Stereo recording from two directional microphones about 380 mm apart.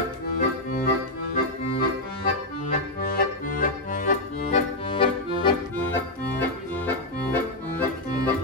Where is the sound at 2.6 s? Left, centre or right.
Left.